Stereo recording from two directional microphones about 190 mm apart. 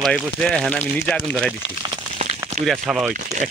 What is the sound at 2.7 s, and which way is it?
Speech, 5° right (ahead or behind).